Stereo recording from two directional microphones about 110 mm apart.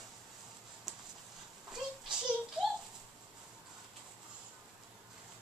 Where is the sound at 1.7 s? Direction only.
5° right (ahead or behind).